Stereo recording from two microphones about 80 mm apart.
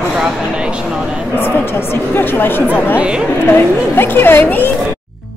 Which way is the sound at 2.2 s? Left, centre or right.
Left.